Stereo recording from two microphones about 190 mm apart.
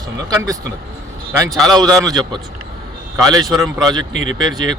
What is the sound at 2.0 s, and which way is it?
Speech, 20° right (ahead or behind).